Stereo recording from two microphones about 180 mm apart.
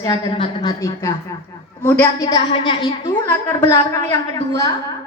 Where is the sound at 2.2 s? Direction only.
25° left (ahead or behind).